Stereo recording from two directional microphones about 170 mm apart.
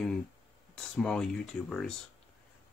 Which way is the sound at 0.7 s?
5° left (ahead or behind).